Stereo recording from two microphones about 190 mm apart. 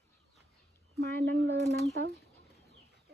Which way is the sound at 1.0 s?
60° right (ahead or behind).